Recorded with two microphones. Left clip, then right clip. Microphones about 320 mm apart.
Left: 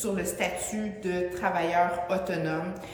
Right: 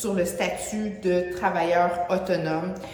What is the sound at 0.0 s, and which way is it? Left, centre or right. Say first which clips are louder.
A woman's voice: right 4 dB; centre.